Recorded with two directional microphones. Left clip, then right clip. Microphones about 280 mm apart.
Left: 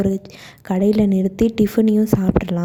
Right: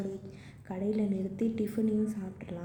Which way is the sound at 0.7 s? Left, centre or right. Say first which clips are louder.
Left 16 dB; left.